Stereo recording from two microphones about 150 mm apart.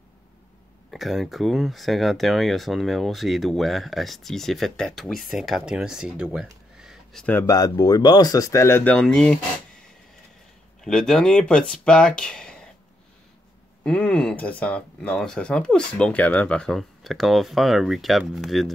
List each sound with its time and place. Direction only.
0.9 s speech: centre (ahead or behind)
6.8 s a sound: centre (ahead or behind)
7.3 s speech: 25° left (ahead or behind); by 9.4 s 5° left (ahead or behind)
10.8 s speech: 5° left (ahead or behind)
13.8 s speech: 5° left (ahead or behind)